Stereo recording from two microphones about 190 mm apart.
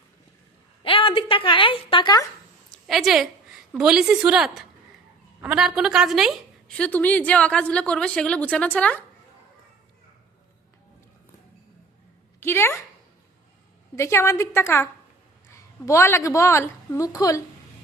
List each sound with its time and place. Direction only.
0.8 s a woman's voice: 30° left (ahead or behind)
2.7 s a woman's voice: centre (ahead or behind)
12.4 s a woman's voice: 10° left (ahead or behind)
13.9 s a woman's voice: 15° left (ahead or behind)